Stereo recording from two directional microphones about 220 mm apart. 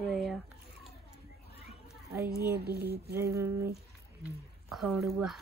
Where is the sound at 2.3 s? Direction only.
45° right (ahead or behind).